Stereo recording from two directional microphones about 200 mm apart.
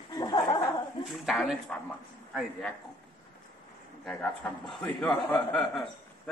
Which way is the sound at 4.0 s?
5° left (ahead or behind).